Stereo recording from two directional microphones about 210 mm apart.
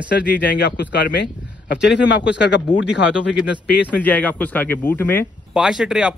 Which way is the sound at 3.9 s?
5° left (ahead or behind).